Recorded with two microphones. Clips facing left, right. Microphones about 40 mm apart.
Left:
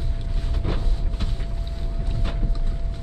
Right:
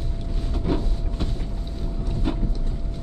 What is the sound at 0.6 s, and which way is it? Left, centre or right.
Vehicle, centre.